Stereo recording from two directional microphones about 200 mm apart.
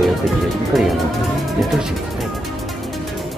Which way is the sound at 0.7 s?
Centre (ahead or behind).